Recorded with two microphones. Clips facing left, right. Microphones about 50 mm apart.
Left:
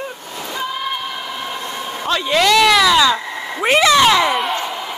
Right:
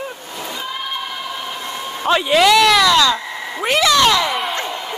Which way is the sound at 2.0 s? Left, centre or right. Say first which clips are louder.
Right 4 dB; centre.